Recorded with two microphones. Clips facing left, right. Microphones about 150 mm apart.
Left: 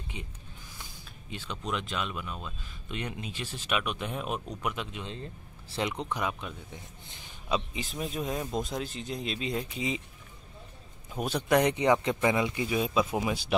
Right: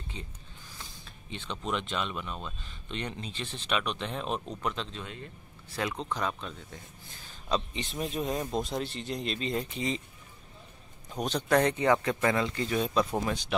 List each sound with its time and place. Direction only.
0.1 s speech: 10° left (ahead or behind)
5.0 s speech: 30° left (ahead or behind); by 10.0 s 5° left (ahead or behind)
11.1 s speech: 10° left (ahead or behind)